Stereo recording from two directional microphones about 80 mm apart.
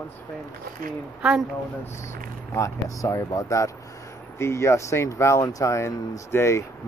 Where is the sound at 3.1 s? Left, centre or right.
Left.